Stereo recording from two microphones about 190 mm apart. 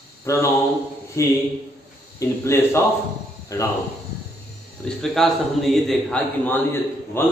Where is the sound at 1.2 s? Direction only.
15° left (ahead or behind).